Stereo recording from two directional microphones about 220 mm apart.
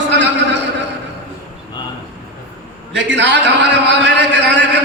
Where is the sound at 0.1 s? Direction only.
50° right (ahead or behind).